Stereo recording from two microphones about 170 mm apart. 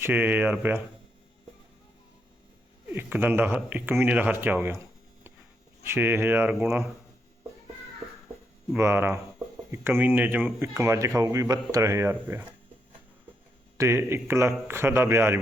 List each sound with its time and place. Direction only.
0.0 s speech: 10° right (ahead or behind)
2.9 s speech: 10° right (ahead or behind)
5.8 s speech: 15° right (ahead or behind)
8.7 s speech: 15° right (ahead or behind)
13.7 s speech: 15° right (ahead or behind)